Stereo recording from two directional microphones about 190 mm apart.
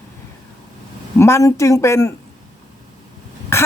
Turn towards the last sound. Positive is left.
turn(degrees=15)  # may be behind; listen again after turning